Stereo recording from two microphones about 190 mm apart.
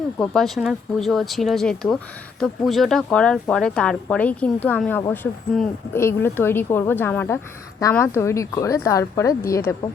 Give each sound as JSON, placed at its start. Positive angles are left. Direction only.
{"t": 0.2, "sound": "speech", "side_deg": 0}